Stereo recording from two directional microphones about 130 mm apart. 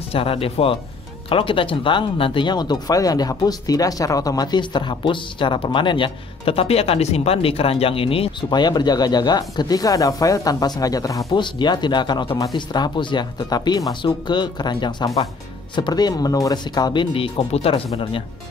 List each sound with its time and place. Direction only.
0.1 s speech: 45° left (ahead or behind)
8.5 s speech: 35° left (ahead or behind); by 17.8 s 50° left (ahead or behind)